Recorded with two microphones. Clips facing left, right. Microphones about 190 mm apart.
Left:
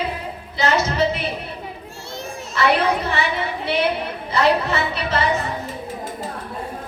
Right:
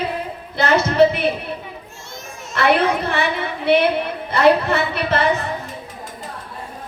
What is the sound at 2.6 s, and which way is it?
Speech, 60° right (ahead or behind).